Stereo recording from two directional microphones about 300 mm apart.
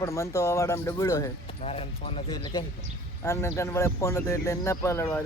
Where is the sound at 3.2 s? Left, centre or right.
Centre.